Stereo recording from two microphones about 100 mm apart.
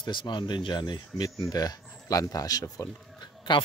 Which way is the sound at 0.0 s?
50° left (ahead or behind).